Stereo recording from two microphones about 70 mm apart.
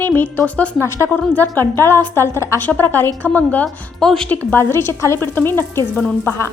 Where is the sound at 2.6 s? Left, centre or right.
Left.